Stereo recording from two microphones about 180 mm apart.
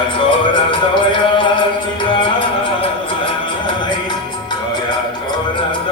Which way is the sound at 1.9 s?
30° left (ahead or behind).